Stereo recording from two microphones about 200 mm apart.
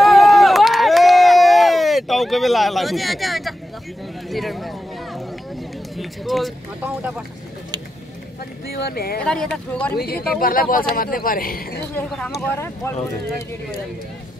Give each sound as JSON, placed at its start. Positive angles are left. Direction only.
{"t": 0.0, "sound": "run", "side_deg": 0}
{"t": 4.3, "sound": "a sound", "side_deg": 0}
{"t": 5.9, "sound": "speech", "side_deg": 0}
{"t": 8.7, "sound": "speech", "side_deg": 50}
{"t": 9.2, "sound": "speech", "side_deg": 5}
{"t": 9.9, "sound": "speech", "side_deg": 50}
{"t": 11.9, "sound": "speech", "side_deg": 5}